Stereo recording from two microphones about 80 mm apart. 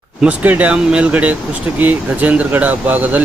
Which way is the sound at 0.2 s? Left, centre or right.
Centre.